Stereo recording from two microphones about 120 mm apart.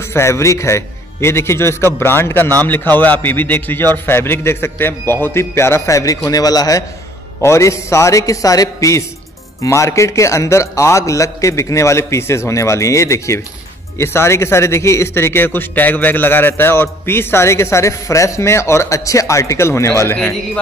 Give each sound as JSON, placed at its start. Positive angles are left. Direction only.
{"t": 0.1, "sound": "a man's voice", "side_deg": 20}